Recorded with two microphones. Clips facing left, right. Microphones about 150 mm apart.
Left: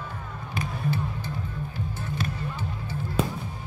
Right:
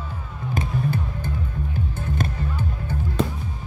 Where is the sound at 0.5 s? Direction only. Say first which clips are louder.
Right 4 dB; 50° right (ahead or behind).